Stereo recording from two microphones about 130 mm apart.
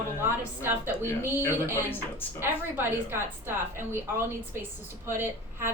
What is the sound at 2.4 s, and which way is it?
A woman's voice, 15° right (ahead or behind).